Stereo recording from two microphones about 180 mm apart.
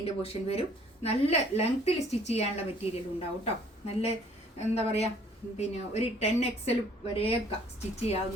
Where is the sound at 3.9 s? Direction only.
35° left (ahead or behind).